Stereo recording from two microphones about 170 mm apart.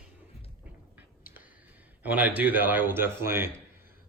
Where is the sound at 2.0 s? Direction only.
10° right (ahead or behind).